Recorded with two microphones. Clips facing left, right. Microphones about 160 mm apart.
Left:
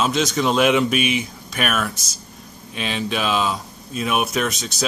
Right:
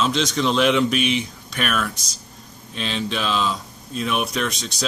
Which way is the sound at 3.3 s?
55° left (ahead or behind).